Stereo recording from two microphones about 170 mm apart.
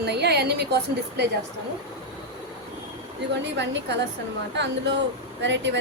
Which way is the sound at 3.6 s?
90° right.